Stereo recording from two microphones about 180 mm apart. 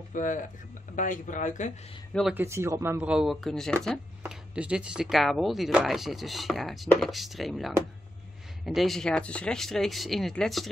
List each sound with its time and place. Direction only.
0.1 s speech: 45° left (ahead or behind)
2.3 s speech: 15° right (ahead or behind); by 10.7 s centre (ahead or behind)